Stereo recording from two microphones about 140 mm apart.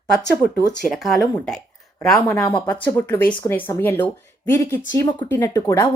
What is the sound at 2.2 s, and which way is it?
Speech, 20° left (ahead or behind).